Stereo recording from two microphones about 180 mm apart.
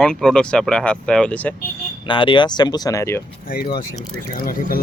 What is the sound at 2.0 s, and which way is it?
Speech, 25° left (ahead or behind).